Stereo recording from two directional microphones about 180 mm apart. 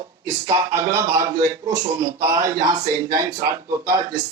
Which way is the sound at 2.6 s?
20° right (ahead or behind).